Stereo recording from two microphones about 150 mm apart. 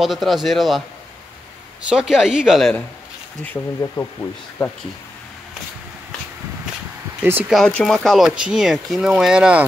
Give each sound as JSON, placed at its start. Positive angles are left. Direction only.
{"t": 0.0, "sound": "speech", "side_deg": 0}
{"t": 1.9, "sound": "speech", "side_deg": -5}
{"t": 3.4, "sound": "speech", "side_deg": 15}
{"t": 7.2, "sound": "speech", "side_deg": -10}
{"t": 7.5, "sound": "speech", "side_deg": 5}